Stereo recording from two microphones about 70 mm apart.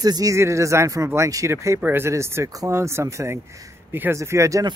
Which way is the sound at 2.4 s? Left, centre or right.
Right.